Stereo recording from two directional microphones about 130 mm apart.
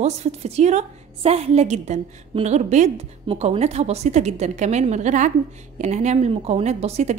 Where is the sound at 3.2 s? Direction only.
50° right (ahead or behind).